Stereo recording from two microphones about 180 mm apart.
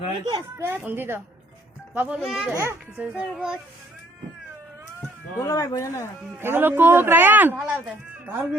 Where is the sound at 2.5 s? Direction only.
15° right (ahead or behind).